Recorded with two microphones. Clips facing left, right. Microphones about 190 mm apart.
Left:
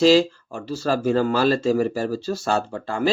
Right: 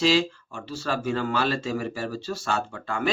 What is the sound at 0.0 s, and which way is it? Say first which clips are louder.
Speech: left 7 dB; 40° left (ahead or behind).